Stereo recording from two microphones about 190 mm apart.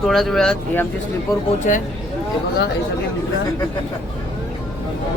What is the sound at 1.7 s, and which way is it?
Speech, 40° left (ahead or behind).